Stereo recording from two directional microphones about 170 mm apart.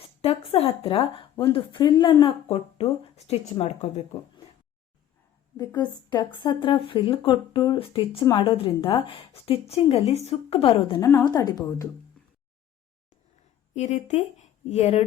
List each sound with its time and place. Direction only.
0.2 s speech: 35° left (ahead or behind)
5.5 s speech: 25° left (ahead or behind)
11.0 s speech: 15° left (ahead or behind)
13.7 s speech: 40° left (ahead or behind)